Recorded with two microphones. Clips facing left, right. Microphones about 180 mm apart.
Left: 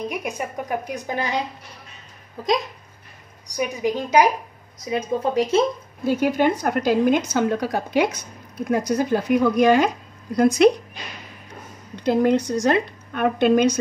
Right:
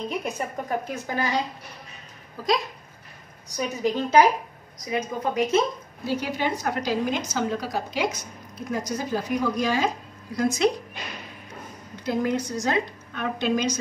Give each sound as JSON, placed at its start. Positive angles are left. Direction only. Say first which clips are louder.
{"t": 0.1, "sound": "a woman's voice", "louder": "left 1 dB", "side_deg": 10}
{"t": 4.7, "sound": "a woman's voice", "louder": "left 4 dB", "side_deg": 30}
{"t": 6.0, "sound": "a woman's voice", "louder": "left 7 dB", "side_deg": 50}
{"t": 11.9, "sound": "a woman's voice", "louder": "left 7 dB", "side_deg": 65}